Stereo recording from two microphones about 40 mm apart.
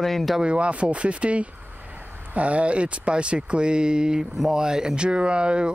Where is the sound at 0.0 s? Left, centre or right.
Centre.